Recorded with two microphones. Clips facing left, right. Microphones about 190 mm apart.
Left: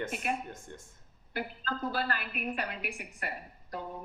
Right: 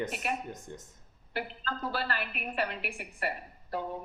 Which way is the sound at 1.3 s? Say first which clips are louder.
Even; 45° left (ahead or behind).